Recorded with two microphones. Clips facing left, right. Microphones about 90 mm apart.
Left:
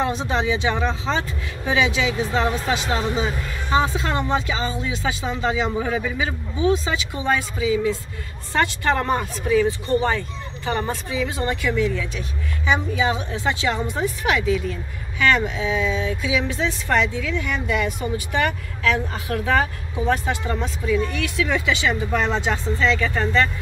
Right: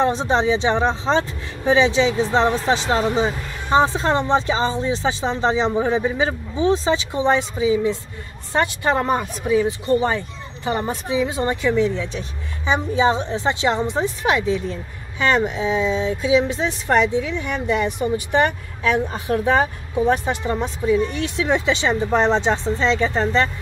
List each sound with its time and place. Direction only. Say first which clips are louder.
0.0 s speech: right 4 dB; 30° right (ahead or behind)